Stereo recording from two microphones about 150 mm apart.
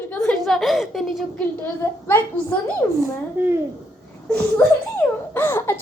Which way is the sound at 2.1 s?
15° left (ahead or behind).